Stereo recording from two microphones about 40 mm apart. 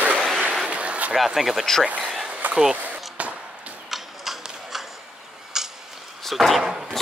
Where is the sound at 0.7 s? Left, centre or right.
Right.